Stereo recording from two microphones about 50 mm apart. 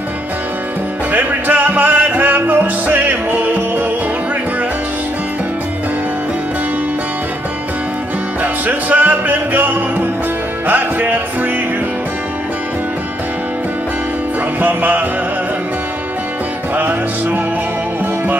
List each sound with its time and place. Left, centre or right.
1.1 s music: right
8.6 s music: right
10.7 s music: right
14.6 s music: right
16.7 s music: right